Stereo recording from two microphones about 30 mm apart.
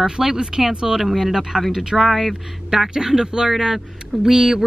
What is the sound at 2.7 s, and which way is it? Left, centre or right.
A woman's voice, centre.